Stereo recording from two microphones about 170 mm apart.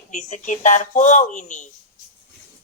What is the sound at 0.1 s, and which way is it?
Speech, 45° left (ahead or behind).